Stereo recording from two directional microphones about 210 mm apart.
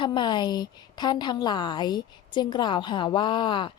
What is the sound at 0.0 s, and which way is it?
A woman's voice, 20° left (ahead or behind).